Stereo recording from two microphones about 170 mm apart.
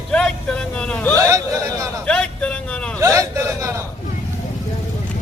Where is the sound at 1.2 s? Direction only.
20° right (ahead or behind).